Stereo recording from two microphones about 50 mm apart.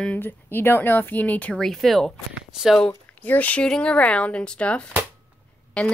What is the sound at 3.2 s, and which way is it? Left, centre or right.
Speech, left.